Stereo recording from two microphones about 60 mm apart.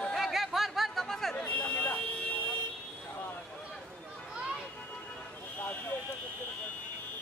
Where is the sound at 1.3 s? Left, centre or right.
Left.